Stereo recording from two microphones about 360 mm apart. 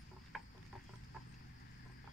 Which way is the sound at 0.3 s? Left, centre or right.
Centre.